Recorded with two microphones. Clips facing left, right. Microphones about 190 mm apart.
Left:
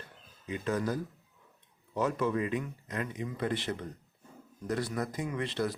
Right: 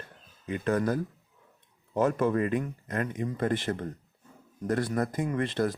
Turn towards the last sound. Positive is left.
turn(degrees=-50)  # may be behind; listen again after turning